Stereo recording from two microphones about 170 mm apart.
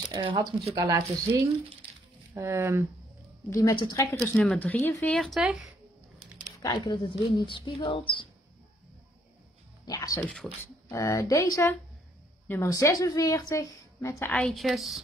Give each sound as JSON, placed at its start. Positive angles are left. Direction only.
{"t": 0.1, "sound": "speech", "side_deg": -30}
{"t": 3.4, "sound": "a woman's voice", "side_deg": 20}
{"t": 6.6, "sound": "speech", "side_deg": 25}
{"t": 9.8, "sound": "speech", "side_deg": 20}
{"t": 10.2, "sound": "speech", "side_deg": 5}
{"t": 10.9, "sound": "a woman's voice", "side_deg": 20}